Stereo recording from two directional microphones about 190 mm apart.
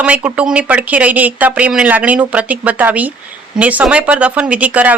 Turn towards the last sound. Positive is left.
turn(degrees=-10)  # may be behind; listen again after turning